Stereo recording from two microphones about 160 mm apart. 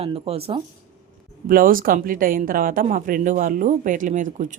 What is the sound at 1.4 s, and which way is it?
Speech, 60° right (ahead or behind).